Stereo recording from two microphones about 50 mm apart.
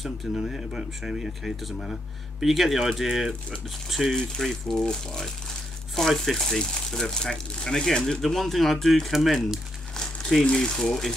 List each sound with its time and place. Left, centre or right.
0.0 s speech: centre
10.4 s speech: centre
10.8 s speech: centre